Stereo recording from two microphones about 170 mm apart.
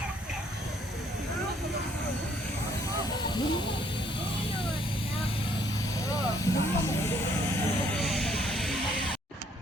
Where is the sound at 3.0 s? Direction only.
25° left (ahead or behind).